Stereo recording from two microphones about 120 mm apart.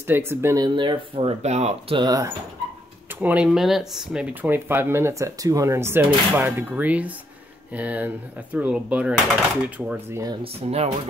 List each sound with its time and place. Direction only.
0.0 s speech: 20° right (ahead or behind)
0.7 s speech: 45° right (ahead or behind)
1.4 s speech: 70° right (ahead or behind)
2.0 s speech: 30° right (ahead or behind)
3.1 s speech: 15° right (ahead or behind)
3.4 s speech: 5° right (ahead or behind)
10.4 s speech: 60° right (ahead or behind)